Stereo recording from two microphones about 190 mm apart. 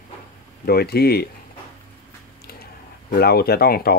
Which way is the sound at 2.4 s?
55° left (ahead or behind).